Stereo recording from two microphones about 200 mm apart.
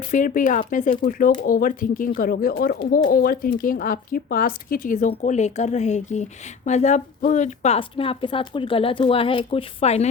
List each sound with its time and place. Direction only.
0.1 s a woman's voice: 40° left (ahead or behind)